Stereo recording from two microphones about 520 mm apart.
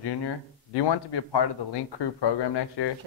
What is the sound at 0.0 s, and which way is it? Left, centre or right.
Speech, left.